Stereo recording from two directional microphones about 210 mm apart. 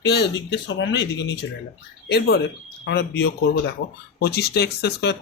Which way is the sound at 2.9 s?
50° left (ahead or behind).